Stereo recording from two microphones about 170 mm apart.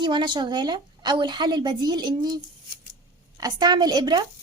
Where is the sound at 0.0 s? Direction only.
25° right (ahead or behind).